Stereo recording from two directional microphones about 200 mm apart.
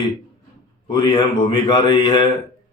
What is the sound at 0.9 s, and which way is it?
A man's voice, 25° left (ahead or behind).